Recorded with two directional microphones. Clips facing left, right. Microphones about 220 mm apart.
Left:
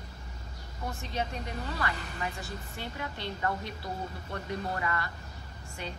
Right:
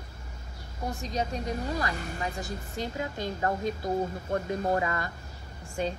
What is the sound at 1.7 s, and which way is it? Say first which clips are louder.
A woman's voice: right 4 dB; 40° right (ahead or behind).